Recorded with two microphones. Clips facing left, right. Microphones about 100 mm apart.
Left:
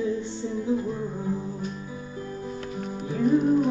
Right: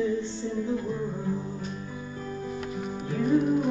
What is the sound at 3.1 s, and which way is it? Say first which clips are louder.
Music: left 3 dB; 5° left (ahead or behind).